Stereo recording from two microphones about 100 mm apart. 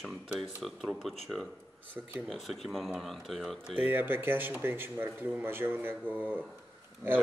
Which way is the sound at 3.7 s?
20° right (ahead or behind).